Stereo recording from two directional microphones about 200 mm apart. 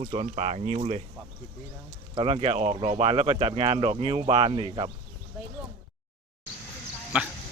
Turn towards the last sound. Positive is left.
turn(degrees=-5)  # may be behind; listen again after turning